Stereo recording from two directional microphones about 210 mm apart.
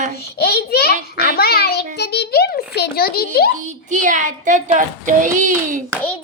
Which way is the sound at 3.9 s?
40° right (ahead or behind).